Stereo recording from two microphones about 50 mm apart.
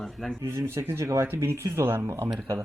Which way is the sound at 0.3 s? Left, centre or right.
Right.